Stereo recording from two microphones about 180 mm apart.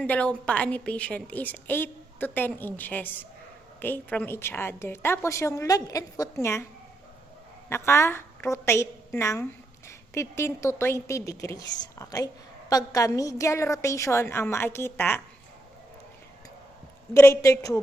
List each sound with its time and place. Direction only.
0.0 s a woman's voice: 5° left (ahead or behind)
7.7 s a woman's voice: 15° left (ahead or behind)
17.2 s a woman's voice: 15° left (ahead or behind)